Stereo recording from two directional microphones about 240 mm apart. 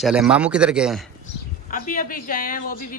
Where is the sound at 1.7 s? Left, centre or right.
Left.